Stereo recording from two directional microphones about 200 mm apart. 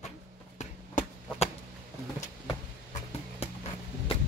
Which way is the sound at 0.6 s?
35° left (ahead or behind).